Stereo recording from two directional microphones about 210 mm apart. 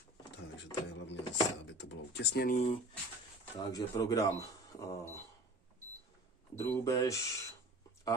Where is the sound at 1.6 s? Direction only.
55° left (ahead or behind); by 2.8 s 35° left (ahead or behind).